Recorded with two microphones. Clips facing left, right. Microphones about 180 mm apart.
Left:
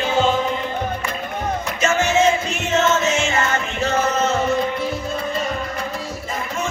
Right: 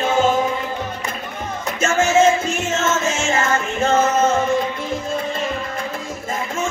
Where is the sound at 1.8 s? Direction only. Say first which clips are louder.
Right 3 dB; 50° right (ahead or behind).